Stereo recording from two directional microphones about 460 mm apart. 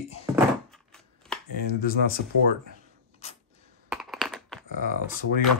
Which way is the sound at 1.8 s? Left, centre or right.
Centre.